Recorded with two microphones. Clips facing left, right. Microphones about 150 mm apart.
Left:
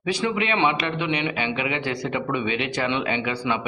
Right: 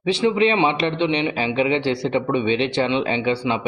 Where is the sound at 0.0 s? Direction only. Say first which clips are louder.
Right 7 dB; 25° right (ahead or behind).